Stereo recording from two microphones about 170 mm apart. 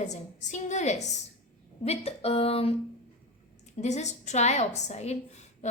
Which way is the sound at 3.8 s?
40° left (ahead or behind).